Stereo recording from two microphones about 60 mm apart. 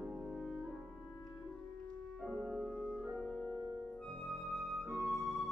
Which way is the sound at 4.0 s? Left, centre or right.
Centre.